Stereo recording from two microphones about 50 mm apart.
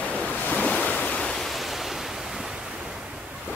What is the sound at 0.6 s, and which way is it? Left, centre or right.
Waves, left.